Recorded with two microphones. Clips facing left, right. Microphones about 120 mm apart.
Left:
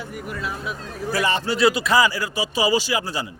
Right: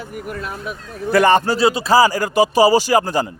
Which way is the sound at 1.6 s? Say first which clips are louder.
Right 4 dB; 30° right (ahead or behind).